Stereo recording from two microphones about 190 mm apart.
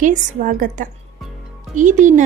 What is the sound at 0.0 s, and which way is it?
A woman's voice, 40° right (ahead or behind).